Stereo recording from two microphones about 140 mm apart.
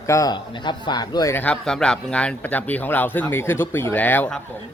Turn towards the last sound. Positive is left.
turn(degrees=10)  # may be behind; listen again after turning